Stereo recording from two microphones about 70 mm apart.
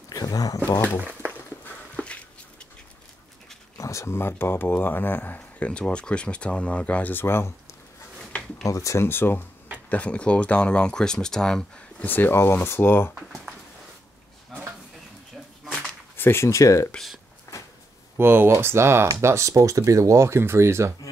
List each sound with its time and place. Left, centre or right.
0.1 s a sound: left
0.9 s speech: centre
2.0 s a sound: centre
3.7 s speech: left
5.7 s speech: centre; by 7.5 s left
8.6 s speech: left
9.0 s speech: left
9.8 s speech: centre
12.0 s speech: left
16.2 s speech: left
17.5 s a sound: left
18.1 s speech: right